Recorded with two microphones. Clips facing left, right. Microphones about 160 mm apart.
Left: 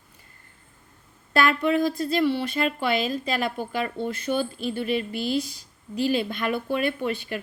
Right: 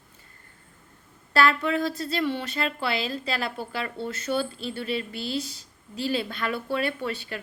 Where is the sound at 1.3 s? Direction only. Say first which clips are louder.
Left 2 dB; 15° left (ahead or behind).